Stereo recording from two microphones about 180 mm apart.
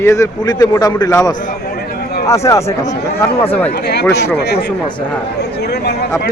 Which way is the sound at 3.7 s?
65° left (ahead or behind).